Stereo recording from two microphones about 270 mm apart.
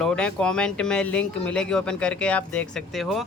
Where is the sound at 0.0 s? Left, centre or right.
Centre.